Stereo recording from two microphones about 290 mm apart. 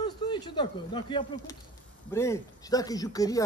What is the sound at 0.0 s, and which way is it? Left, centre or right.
Speech, centre.